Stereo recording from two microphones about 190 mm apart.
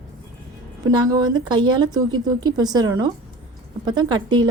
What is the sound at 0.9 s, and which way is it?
Speech, 20° right (ahead or behind).